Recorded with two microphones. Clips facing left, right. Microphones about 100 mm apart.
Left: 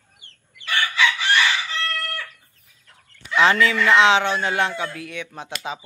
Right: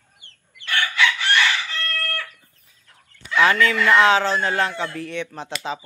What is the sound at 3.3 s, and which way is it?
Speech, 20° left (ahead or behind).